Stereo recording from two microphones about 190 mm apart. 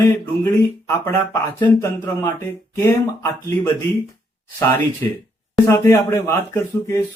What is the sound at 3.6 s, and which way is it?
Speech, 10° left (ahead or behind).